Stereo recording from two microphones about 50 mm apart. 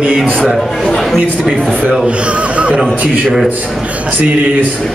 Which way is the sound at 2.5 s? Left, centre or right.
Right.